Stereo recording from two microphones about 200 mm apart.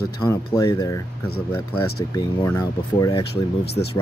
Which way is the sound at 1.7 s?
90° left.